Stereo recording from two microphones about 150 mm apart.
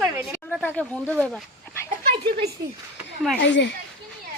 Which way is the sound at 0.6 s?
10° left (ahead or behind).